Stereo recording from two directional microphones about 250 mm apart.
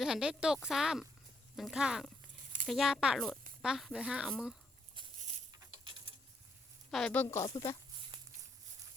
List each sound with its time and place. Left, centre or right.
0.0 s speech: centre
4.9 s patter: centre
6.9 s speech: centre
8.1 s a sound: centre